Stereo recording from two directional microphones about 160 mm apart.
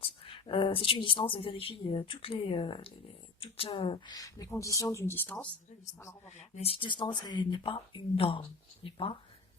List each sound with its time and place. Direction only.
0.0 s speech: 35° left (ahead or behind); by 5.5 s 10° left (ahead or behind)
6.2 s speech: 45° left (ahead or behind)